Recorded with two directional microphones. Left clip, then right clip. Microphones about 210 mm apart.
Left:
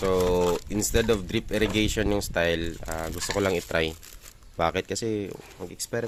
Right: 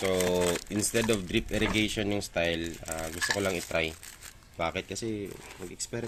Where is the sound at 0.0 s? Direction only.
35° left (ahead or behind).